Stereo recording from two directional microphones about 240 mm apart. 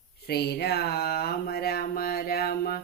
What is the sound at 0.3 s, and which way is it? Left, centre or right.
Speech, left.